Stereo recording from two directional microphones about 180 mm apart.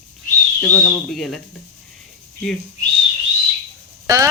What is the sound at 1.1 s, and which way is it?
Speech, centre (ahead or behind).